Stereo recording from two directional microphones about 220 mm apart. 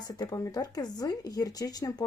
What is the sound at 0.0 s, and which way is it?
Speech, 15° left (ahead or behind).